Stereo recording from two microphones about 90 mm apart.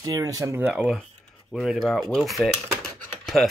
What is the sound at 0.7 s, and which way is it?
Speech, 5° right (ahead or behind).